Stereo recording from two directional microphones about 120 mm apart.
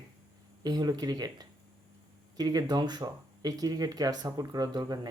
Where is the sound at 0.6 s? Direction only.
35° right (ahead or behind).